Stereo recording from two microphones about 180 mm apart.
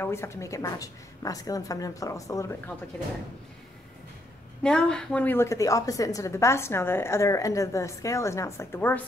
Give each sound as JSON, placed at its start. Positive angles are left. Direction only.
{"t": 0.0, "sound": "a woman's voice", "side_deg": 15}
{"t": 4.6, "sound": "a woman's voice", "side_deg": 5}